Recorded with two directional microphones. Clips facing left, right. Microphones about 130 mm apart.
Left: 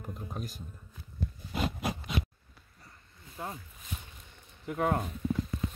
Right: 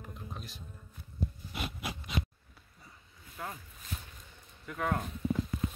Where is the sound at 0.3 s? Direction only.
45° left (ahead or behind).